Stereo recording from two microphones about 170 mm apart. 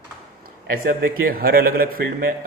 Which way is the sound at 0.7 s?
60° right (ahead or behind).